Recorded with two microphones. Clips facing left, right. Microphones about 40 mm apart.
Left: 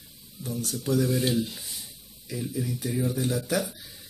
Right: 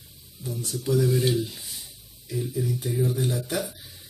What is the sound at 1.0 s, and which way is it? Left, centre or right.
Speech, centre.